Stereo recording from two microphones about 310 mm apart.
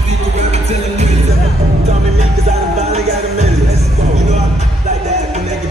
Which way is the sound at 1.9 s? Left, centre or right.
Right.